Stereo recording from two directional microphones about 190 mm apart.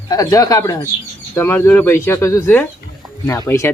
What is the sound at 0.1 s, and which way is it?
Speech, 15° left (ahead or behind).